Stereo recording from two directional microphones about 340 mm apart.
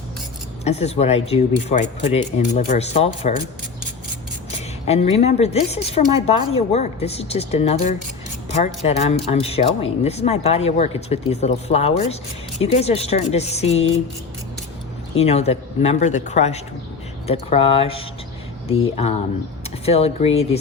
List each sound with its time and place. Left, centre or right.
0.6 s speech: centre
4.9 s speech: centre
15.2 s speech: centre